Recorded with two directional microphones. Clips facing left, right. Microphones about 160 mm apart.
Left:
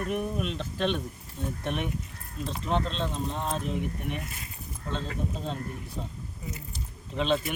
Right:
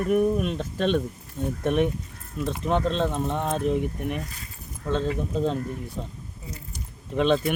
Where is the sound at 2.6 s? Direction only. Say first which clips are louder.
Right 5 dB; 55° right (ahead or behind).